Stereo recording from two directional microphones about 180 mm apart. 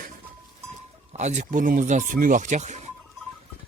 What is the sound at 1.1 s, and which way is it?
Speech, 40° right (ahead or behind).